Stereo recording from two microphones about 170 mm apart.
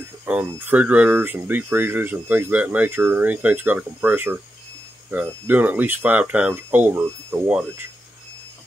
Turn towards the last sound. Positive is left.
turn(degrees=-5)  # may be behind; listen again after turning